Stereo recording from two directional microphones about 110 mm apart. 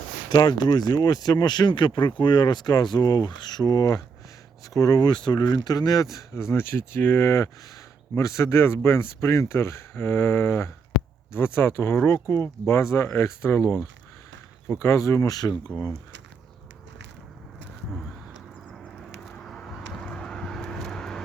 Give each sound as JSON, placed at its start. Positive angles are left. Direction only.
{"t": 0.3, "sound": "speech", "side_deg": 40}
{"t": 19.2, "sound": "vehicle", "side_deg": 5}